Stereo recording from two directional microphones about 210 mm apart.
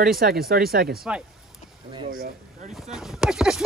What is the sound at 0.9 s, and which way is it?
Speech, 5° right (ahead or behind).